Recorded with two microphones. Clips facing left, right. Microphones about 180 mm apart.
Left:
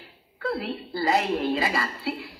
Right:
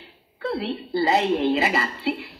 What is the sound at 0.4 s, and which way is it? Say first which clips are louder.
A woman's voice: right 2 dB; 25° right (ahead or behind).